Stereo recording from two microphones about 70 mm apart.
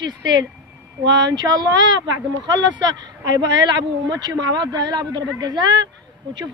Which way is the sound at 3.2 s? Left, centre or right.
Right.